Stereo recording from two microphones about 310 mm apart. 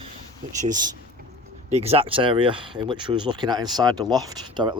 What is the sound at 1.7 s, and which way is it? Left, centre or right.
Speech, centre.